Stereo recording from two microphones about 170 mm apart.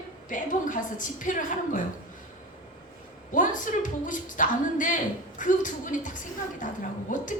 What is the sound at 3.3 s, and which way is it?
A woman's voice, 50° left (ahead or behind).